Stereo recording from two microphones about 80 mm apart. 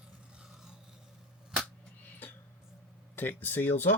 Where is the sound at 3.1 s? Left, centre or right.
Left.